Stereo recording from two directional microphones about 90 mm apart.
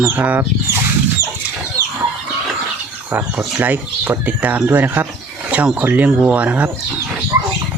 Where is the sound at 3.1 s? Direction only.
20° right (ahead or behind).